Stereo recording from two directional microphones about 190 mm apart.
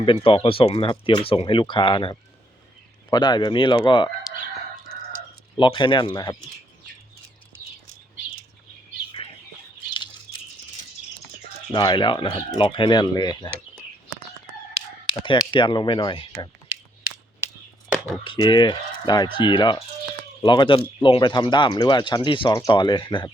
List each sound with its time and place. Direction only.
0.0 s speech: 25° left (ahead or behind)
5.5 s speech: 25° left (ahead or behind)
11.7 s speech: 25° left (ahead or behind)
15.2 s speech: 25° left (ahead or behind)
17.8 s chop: 5° right (ahead or behind)
18.2 s speech: 25° left (ahead or behind)